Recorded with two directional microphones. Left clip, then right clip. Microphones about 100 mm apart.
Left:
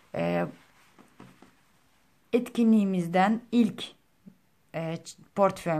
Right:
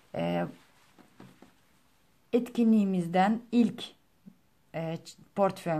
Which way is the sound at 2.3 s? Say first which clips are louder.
Left 2 dB; 15° left (ahead or behind).